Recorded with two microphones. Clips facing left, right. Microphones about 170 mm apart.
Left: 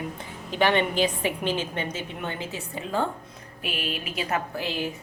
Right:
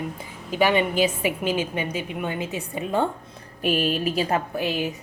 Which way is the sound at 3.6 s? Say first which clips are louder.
Right 10 dB; 40° right (ahead or behind).